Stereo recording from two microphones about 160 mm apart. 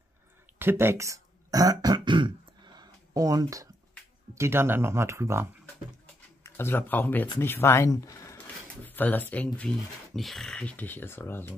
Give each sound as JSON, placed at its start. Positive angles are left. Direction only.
{"t": 0.6, "sound": "throat clearing", "side_deg": -15}
{"t": 4.4, "sound": "speech", "side_deg": -15}
{"t": 6.4, "sound": "speech", "side_deg": 15}